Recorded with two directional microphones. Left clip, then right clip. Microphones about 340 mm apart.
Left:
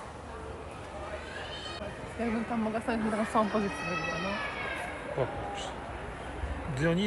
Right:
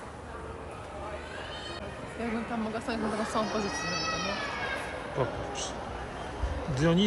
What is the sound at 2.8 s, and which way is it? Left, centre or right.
Speech, left.